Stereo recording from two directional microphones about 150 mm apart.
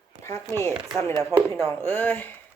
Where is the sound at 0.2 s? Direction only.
20° left (ahead or behind).